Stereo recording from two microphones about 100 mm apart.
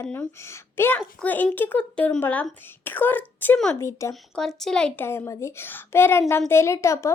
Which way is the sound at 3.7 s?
30° left (ahead or behind).